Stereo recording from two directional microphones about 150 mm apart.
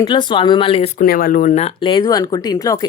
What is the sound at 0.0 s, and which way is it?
Speech, 30° left (ahead or behind).